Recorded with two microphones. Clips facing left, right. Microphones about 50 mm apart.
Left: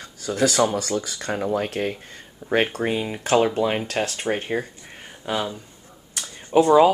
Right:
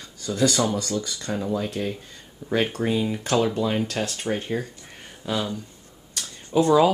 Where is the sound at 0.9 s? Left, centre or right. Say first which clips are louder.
Left 2 dB; left.